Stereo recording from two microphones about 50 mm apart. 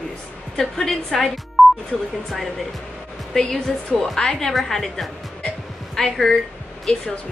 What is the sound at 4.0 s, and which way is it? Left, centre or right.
A woman's voice, centre.